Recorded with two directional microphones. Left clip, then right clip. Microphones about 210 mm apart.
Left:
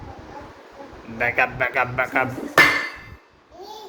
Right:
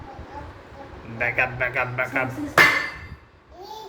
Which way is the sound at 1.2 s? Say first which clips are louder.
Left 2 dB; 20° left (ahead or behind).